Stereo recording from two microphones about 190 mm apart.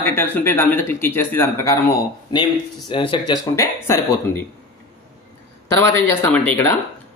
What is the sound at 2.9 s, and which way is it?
Speech, 25° left (ahead or behind).